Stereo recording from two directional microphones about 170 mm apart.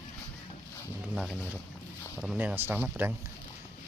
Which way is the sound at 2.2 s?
5° right (ahead or behind).